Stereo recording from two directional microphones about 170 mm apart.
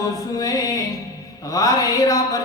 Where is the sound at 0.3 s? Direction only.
20° left (ahead or behind).